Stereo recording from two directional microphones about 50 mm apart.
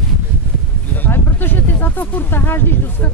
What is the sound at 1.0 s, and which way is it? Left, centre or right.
Speech, left.